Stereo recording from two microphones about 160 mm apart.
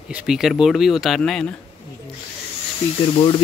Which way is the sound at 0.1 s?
Centre (ahead or behind).